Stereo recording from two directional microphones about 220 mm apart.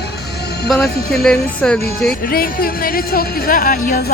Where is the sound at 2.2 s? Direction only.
40° left (ahead or behind).